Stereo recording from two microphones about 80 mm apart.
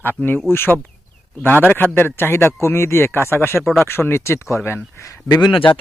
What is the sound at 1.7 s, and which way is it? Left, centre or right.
Speech, left.